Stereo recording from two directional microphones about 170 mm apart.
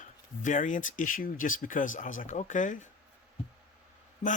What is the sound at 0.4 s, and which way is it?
Speech, 50° left (ahead or behind).